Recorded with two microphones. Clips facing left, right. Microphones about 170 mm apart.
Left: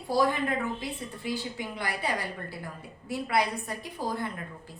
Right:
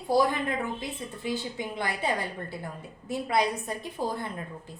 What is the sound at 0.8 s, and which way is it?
A woman's voice, 20° right (ahead or behind).